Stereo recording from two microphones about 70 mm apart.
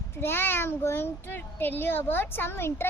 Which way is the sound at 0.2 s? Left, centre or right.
Left.